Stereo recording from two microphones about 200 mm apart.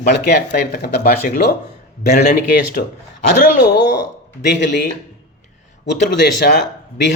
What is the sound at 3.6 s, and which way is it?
Speech, 55° left (ahead or behind).